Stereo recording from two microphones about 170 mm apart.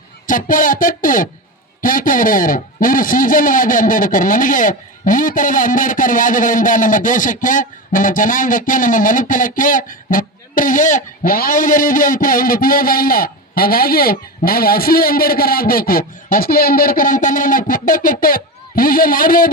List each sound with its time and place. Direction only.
0.3 s a man's voice: 50° left (ahead or behind)